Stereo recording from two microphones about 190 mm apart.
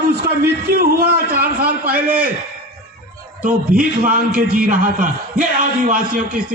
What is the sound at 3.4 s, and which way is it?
A man's voice, 45° right (ahead or behind).